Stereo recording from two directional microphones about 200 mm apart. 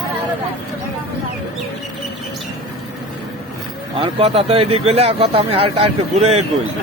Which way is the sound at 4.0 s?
30° right (ahead or behind).